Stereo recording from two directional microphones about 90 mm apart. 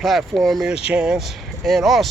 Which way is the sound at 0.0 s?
Centre (ahead or behind).